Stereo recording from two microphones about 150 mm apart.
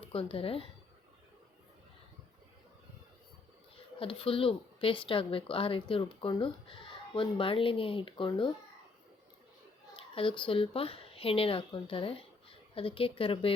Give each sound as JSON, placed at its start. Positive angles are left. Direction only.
{"t": 0.0, "sound": "speech", "side_deg": 40}
{"t": 3.9, "sound": "speech", "side_deg": 35}
{"t": 9.9, "sound": "speech", "side_deg": 35}